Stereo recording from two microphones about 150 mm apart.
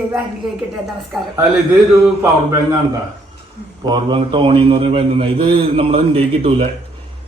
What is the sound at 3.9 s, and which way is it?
A man's voice, 30° right (ahead or behind).